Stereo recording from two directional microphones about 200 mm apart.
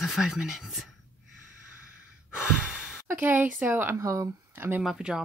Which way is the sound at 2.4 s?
5° right (ahead or behind).